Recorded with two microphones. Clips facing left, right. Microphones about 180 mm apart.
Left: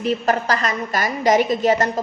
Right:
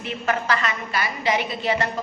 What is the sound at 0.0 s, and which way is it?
A woman's voice, 40° left (ahead or behind).